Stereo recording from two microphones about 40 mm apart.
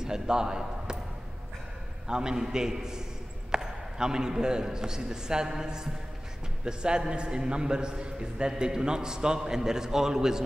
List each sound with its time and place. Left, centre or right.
0.0 s a man's voice: centre
2.0 s a man's voice: centre